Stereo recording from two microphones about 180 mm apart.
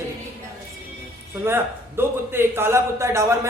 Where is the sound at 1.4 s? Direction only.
10° right (ahead or behind).